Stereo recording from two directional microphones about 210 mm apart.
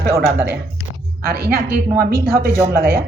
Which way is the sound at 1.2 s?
45° right (ahead or behind).